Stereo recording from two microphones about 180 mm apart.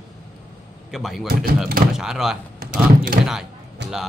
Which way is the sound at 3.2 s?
65° right (ahead or behind).